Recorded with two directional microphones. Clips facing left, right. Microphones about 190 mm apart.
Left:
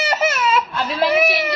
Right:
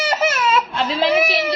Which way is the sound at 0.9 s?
25° right (ahead or behind).